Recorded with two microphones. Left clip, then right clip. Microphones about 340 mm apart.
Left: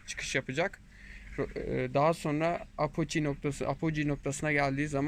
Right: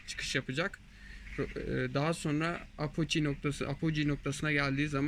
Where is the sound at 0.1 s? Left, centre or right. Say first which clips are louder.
Left 2 dB; centre.